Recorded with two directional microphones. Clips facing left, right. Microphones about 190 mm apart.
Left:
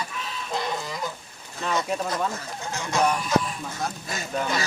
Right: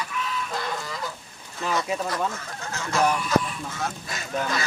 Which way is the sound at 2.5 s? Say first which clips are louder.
Left 1 dB; 15° left (ahead or behind).